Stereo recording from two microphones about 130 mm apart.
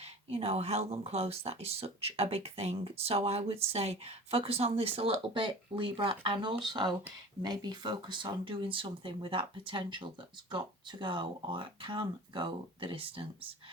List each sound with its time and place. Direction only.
0.0 s speech: 50° right (ahead or behind)